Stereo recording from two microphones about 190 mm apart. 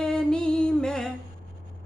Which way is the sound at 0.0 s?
5° left (ahead or behind).